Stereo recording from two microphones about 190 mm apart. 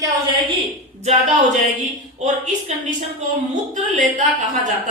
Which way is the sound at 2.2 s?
40° right (ahead or behind).